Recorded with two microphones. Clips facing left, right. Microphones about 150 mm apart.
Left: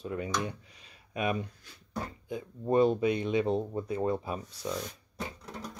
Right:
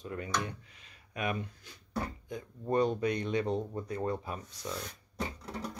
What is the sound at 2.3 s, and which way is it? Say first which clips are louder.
Speech: left 6 dB; 10° left (ahead or behind).